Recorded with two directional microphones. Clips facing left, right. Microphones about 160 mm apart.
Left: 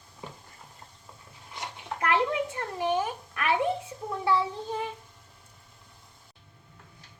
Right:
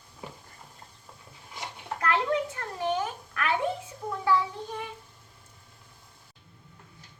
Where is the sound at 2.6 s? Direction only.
15° left (ahead or behind).